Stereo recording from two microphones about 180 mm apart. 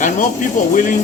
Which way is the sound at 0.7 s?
50° left (ahead or behind).